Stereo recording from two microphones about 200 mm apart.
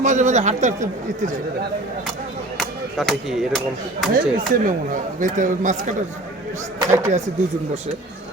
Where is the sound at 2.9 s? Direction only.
Centre (ahead or behind).